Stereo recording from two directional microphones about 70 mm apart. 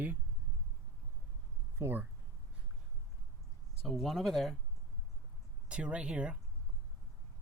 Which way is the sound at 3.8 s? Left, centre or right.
Centre.